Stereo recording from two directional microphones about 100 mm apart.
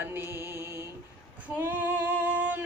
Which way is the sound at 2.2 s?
15° right (ahead or behind).